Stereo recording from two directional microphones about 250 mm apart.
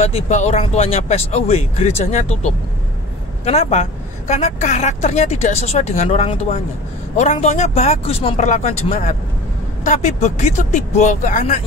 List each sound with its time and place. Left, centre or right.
0.0 s speech: left